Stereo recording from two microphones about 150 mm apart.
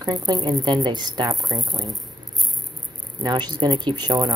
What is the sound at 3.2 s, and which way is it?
Speech, 30° right (ahead or behind).